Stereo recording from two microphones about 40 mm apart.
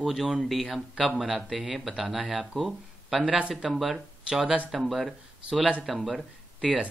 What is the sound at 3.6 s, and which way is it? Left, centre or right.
Speech, centre.